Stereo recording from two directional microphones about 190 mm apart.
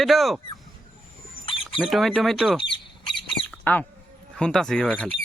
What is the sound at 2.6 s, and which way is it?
Squawk, 25° left (ahead or behind).